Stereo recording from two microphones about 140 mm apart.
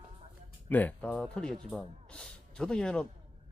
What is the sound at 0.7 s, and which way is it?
Speech, 10° left (ahead or behind).